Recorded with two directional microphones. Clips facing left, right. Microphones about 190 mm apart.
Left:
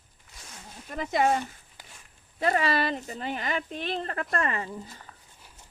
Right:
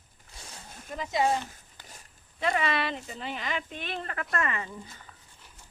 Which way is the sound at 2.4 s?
40° left (ahead or behind).